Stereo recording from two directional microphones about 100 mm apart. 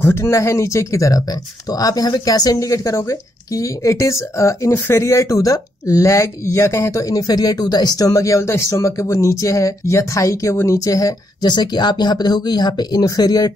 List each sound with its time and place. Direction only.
0.0 s speech: 25° left (ahead or behind)